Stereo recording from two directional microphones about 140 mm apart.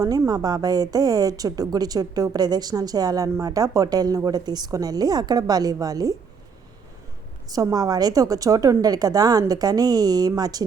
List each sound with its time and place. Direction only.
0.0 s a woman's voice: 25° right (ahead or behind)
7.5 s a woman's voice: 25° right (ahead or behind)